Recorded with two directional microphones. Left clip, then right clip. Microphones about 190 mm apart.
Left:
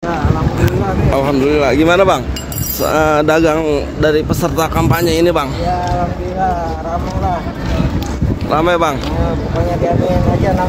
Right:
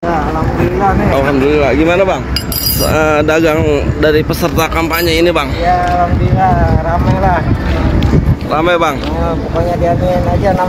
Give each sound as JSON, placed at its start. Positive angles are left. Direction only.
{"t": 1.1, "sound": "speech", "side_deg": 15}
{"t": 2.8, "sound": "speech", "side_deg": 15}
{"t": 8.5, "sound": "speech", "side_deg": 20}